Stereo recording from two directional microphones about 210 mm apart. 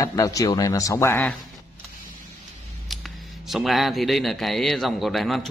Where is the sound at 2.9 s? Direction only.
Centre (ahead or behind).